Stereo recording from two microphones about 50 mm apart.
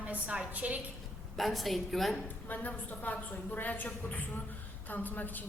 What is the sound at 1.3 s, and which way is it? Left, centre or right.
Speech, centre.